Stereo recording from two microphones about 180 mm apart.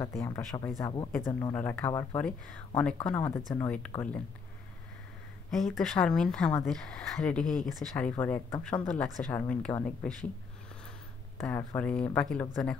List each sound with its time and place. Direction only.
0.2 s speech: 20° left (ahead or behind)
5.5 s speech: centre (ahead or behind)
11.4 s speech: 10° left (ahead or behind)